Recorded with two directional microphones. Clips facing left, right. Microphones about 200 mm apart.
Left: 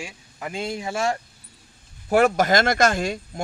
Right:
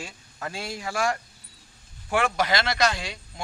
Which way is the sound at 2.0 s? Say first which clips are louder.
Left 7 dB; 40° left (ahead or behind).